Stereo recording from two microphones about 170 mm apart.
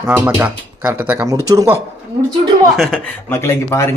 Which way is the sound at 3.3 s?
15° left (ahead or behind).